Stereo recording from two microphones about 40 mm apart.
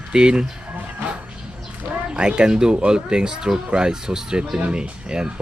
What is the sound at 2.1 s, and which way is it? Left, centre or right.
Speech, right.